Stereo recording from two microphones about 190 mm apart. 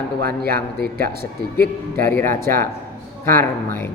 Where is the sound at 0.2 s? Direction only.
55° right (ahead or behind).